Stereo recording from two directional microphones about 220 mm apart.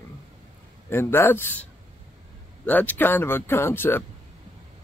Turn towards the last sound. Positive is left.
turn(degrees=10)  # may be behind; listen again after turning